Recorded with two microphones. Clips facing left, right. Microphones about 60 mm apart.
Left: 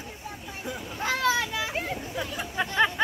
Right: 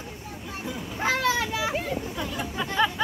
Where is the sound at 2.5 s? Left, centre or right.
Left.